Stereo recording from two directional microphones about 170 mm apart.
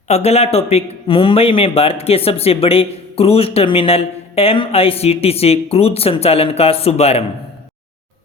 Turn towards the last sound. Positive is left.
turn(degrees=35)  # may be behind; listen again after turning